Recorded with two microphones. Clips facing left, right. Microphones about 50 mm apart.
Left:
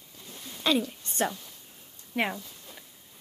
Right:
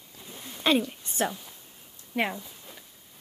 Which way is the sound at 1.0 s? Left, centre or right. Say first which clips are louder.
Even; centre.